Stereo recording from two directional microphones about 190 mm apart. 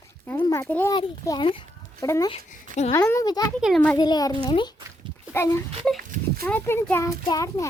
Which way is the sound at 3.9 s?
20° left (ahead or behind).